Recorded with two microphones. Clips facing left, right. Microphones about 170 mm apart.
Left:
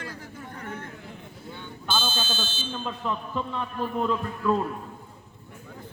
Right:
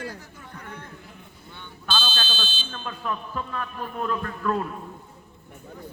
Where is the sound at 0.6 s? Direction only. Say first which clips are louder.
Left 4 dB; 50° left (ahead or behind).